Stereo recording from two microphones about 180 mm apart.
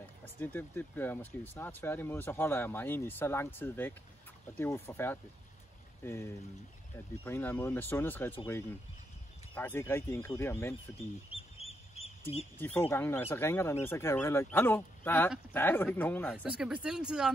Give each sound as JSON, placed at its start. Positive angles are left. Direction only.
{"t": 0.2, "sound": "speech", "side_deg": 10}
{"t": 9.6, "sound": "speech", "side_deg": 15}
{"t": 11.3, "sound": "duck", "side_deg": 35}
{"t": 12.5, "sound": "speech", "side_deg": 10}
{"t": 16.4, "sound": "speech", "side_deg": -5}